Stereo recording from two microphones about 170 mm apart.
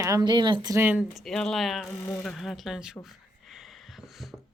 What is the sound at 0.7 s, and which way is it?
Speech, 10° right (ahead or behind).